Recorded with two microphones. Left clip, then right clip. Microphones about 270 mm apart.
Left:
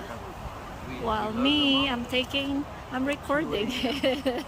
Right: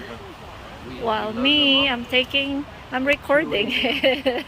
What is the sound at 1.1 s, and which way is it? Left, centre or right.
Speech, centre.